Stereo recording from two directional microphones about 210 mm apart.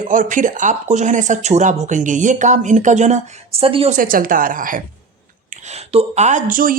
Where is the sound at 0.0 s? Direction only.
40° right (ahead or behind).